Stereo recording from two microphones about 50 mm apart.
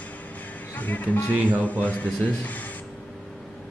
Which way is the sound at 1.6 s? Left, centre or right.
Left.